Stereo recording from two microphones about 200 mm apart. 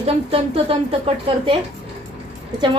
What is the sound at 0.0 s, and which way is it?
A woman's voice, 30° right (ahead or behind).